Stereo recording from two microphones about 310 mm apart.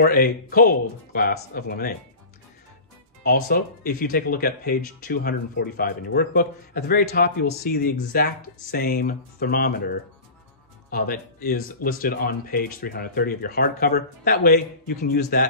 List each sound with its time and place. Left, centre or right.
0.0 s speech: left
3.3 s speech: left